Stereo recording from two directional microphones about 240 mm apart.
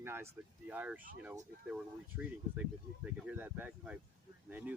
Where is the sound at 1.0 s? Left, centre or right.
Right.